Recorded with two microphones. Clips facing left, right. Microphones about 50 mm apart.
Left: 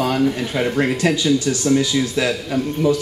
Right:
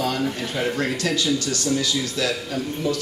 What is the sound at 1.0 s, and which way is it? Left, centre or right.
A man's voice, centre.